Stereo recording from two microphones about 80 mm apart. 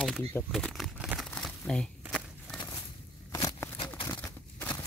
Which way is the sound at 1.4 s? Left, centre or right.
Centre.